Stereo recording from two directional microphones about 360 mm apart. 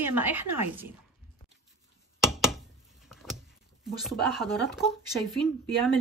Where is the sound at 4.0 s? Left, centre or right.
Centre.